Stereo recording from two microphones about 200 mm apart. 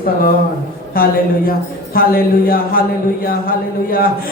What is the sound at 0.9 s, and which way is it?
Speech, 45° left (ahead or behind).